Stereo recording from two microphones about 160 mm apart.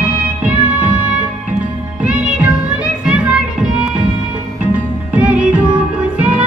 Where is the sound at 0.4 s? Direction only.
10° right (ahead or behind).